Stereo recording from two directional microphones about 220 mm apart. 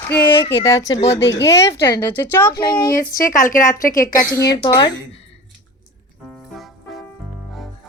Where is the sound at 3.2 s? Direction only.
40° left (ahead or behind).